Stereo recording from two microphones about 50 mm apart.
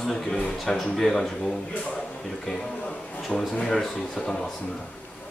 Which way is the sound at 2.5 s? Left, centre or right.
Centre.